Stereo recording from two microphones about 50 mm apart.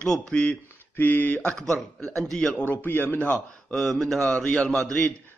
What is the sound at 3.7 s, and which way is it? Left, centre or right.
Speech, centre.